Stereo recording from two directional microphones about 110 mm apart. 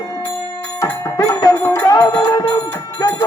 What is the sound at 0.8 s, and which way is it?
Music, 30° left (ahead or behind).